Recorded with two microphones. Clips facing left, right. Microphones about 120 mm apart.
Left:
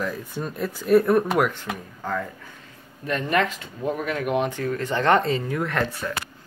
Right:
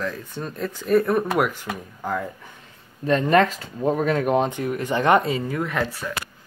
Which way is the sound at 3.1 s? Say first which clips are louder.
Right 5 dB; 35° right (ahead or behind).